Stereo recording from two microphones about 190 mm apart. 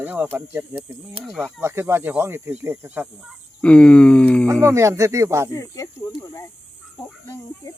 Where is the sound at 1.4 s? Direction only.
15° right (ahead or behind).